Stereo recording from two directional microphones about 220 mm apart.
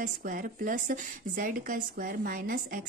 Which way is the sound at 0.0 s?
40° right (ahead or behind).